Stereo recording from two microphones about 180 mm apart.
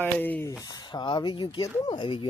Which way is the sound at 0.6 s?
25° left (ahead or behind).